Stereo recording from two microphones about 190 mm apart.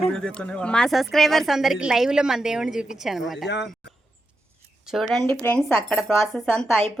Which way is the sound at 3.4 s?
65° left (ahead or behind).